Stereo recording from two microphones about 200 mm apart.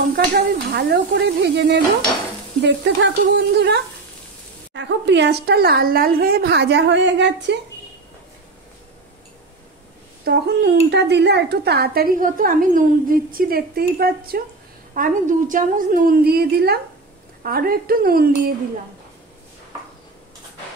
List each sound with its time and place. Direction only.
0.1 s speech: 50° right (ahead or behind)
10.2 s a woman's voice: 55° right (ahead or behind)